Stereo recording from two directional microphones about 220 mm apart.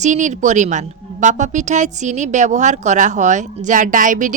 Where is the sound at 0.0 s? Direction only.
35° right (ahead or behind).